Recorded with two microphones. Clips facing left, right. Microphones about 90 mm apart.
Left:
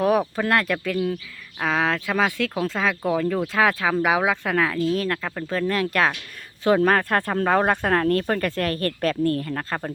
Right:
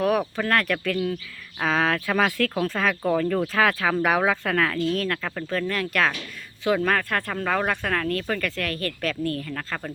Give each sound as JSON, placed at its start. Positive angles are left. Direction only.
{"t": 0.0, "sound": "a sound", "side_deg": 25}
{"t": 0.3, "sound": "speech", "side_deg": 15}
{"t": 5.2, "sound": "speech", "side_deg": 5}
{"t": 5.5, "sound": "speech", "side_deg": 20}
{"t": 6.7, "sound": "speech", "side_deg": 30}
{"t": 9.5, "sound": "speech", "side_deg": 20}